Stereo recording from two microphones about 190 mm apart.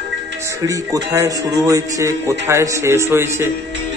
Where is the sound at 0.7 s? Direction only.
15° right (ahead or behind).